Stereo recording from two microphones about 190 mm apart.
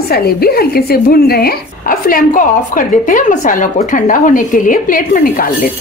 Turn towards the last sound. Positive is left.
turn(degrees=45)  # may be behind; listen again after turning